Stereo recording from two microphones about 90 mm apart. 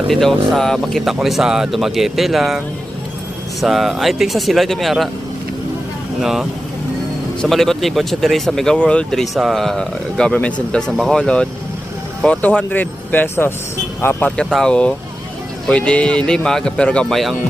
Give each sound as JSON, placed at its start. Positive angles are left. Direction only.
{"t": 0.1, "sound": "speech", "side_deg": 5}
{"t": 3.6, "sound": "speech", "side_deg": 0}
{"t": 6.2, "sound": "speech", "side_deg": -5}
{"t": 14.5, "sound": "speech", "side_deg": 10}